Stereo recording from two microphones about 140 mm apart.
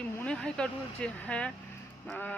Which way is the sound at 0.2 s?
10° left (ahead or behind).